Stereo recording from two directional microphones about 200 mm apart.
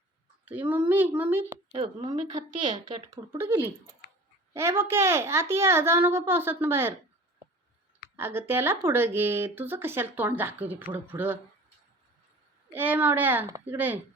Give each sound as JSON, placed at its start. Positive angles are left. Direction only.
{"t": 0.4, "sound": "speech", "side_deg": -10}
{"t": 1.7, "sound": "speech", "side_deg": -20}
{"t": 8.1, "sound": "speech", "side_deg": -10}
{"t": 12.7, "sound": "speech", "side_deg": -10}